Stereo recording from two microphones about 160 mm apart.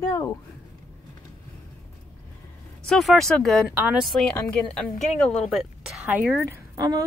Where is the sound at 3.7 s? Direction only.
10° right (ahead or behind).